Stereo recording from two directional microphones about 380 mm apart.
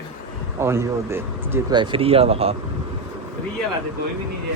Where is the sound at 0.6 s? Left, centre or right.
Centre.